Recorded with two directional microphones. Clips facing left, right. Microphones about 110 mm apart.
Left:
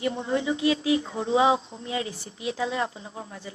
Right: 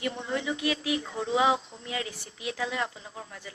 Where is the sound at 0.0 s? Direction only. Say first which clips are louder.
Left 5 dB; 25° left (ahead or behind).